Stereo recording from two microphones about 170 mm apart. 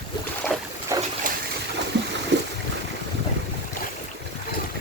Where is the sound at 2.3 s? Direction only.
90° right.